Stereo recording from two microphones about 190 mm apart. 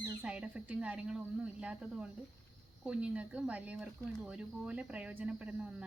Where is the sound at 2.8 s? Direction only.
5° right (ahead or behind).